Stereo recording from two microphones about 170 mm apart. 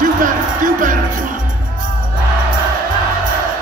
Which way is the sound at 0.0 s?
50° right (ahead or behind).